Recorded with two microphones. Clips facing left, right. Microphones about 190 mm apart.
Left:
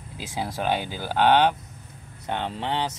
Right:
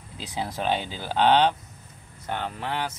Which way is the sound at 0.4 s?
10° left (ahead or behind).